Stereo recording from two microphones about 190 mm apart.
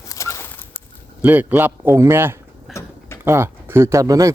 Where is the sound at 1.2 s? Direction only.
10° right (ahead or behind).